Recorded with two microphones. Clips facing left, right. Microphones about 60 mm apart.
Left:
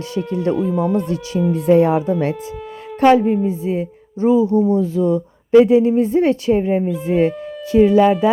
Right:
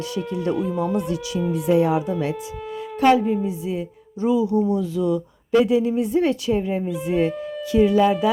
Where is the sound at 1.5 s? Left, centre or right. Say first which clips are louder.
Left 5 dB; left.